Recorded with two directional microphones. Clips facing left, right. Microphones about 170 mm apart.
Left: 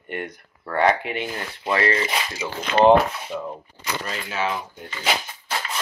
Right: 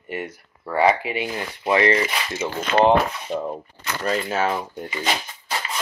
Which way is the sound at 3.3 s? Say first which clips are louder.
Right 4 dB; 25° right (ahead or behind).